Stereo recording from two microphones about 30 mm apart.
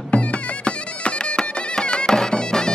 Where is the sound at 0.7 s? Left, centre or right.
Left.